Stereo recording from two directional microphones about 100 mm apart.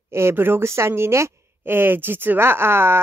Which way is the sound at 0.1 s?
25° right (ahead or behind).